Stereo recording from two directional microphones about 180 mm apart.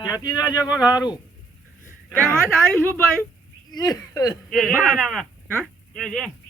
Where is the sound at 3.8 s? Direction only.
20° left (ahead or behind).